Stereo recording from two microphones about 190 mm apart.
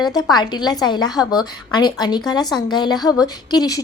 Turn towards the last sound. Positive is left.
turn(degrees=20)  # may be behind; listen again after turning